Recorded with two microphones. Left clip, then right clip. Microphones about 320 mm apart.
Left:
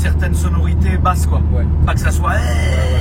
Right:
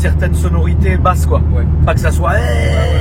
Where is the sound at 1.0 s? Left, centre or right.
Centre.